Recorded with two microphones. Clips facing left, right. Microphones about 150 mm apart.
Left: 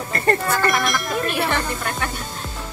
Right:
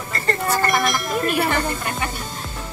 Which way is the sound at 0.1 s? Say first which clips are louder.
Left 5 dB; 60° left (ahead or behind).